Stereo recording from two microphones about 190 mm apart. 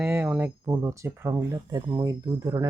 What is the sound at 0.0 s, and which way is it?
Speech, 5° right (ahead or behind).